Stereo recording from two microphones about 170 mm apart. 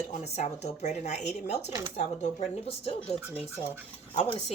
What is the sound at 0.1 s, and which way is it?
Speech, 40° left (ahead or behind).